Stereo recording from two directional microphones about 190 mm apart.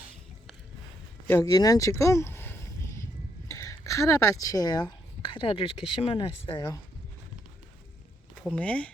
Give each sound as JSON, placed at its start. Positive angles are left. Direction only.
{"t": 1.3, "sound": "a sound", "side_deg": 15}
{"t": 3.5, "sound": "speech", "side_deg": 15}
{"t": 8.5, "sound": "speech", "side_deg": 5}